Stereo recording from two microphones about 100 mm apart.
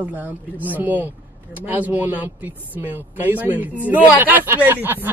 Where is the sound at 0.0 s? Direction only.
20° right (ahead or behind).